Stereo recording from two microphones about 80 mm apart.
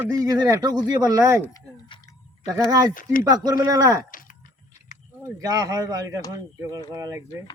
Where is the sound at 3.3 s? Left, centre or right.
Right.